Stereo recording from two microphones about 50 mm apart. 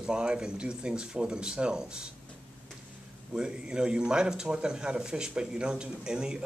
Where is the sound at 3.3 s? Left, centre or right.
Centre.